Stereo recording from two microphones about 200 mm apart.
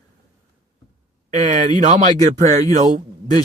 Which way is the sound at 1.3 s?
40° right (ahead or behind).